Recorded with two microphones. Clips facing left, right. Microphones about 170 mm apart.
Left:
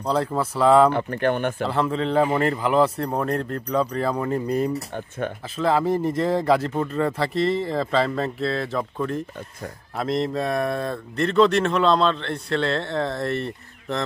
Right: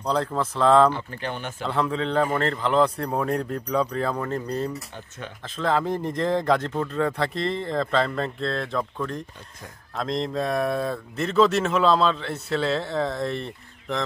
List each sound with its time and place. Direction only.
0.0 s speech: 5° left (ahead or behind)
0.9 s speech: 60° left (ahead or behind)
1.6 s speech: centre (ahead or behind)
4.7 s speech: 55° left (ahead or behind)
5.6 s speech: 5° left (ahead or behind)